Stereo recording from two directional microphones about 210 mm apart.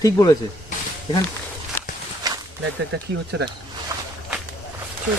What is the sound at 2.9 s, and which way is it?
Speech, 50° right (ahead or behind).